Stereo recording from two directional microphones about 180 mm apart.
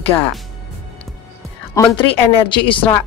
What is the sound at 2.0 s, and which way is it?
Speech, 25° left (ahead or behind).